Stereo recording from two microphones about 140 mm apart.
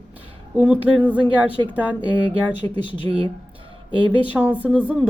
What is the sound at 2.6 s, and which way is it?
Speech, 40° right (ahead or behind).